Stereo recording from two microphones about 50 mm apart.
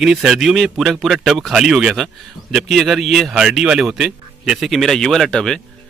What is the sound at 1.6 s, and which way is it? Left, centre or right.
Speech, centre.